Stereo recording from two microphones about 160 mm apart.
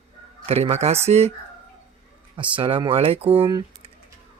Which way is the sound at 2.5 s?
35° right (ahead or behind).